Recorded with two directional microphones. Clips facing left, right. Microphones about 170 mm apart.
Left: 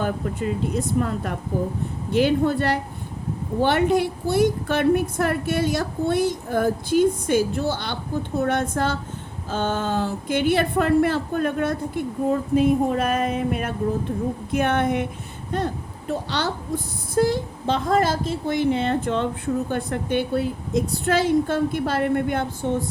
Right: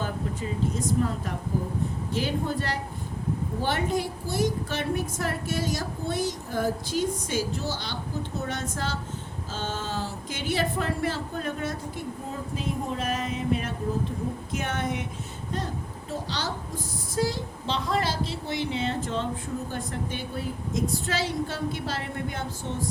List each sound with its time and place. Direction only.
0.0 s a woman's voice: 65° left (ahead or behind)